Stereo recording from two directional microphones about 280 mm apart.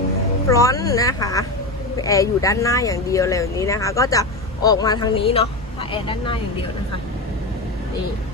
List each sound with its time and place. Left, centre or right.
0.4 s speech: centre